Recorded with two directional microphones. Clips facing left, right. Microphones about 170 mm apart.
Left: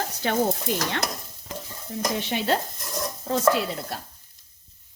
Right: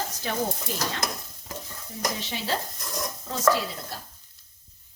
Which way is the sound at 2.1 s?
60° left (ahead or behind).